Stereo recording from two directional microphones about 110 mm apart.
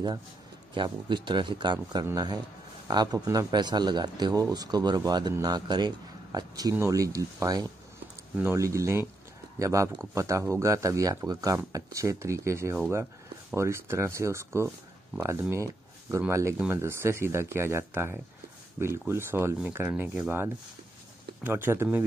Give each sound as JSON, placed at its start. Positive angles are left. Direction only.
{"t": 0.7, "sound": "speech", "side_deg": -45}
{"t": 15.5, "sound": "a sound", "side_deg": -25}
{"t": 16.3, "sound": "speech", "side_deg": -25}
{"t": 16.5, "sound": "speech", "side_deg": -15}
{"t": 16.8, "sound": "speech", "side_deg": -25}